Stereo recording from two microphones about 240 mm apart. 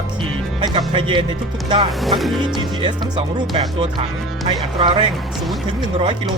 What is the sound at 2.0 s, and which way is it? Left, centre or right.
Speech, centre.